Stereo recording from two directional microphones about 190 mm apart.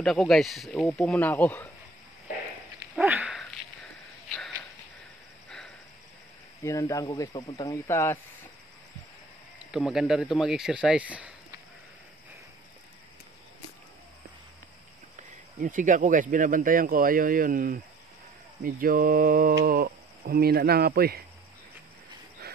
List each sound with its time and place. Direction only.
0.0 s speech: centre (ahead or behind)
3.0 s dog: 5° right (ahead or behind)
4.4 s sniff: 10° left (ahead or behind)
6.6 s speech: 15° left (ahead or behind)
9.7 s speech: centre (ahead or behind)
15.6 s speech: 40° right (ahead or behind)